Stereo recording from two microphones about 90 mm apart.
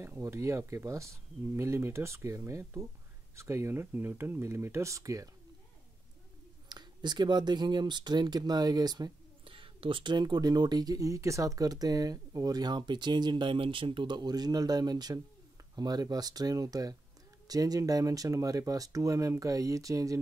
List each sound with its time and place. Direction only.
0.0 s speech: 30° right (ahead or behind)
6.7 s speech: 55° right (ahead or behind)
9.4 s speech: 80° right; by 20.2 s 40° right (ahead or behind)